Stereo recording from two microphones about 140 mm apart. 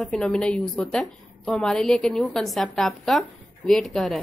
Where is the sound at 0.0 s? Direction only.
5° left (ahead or behind).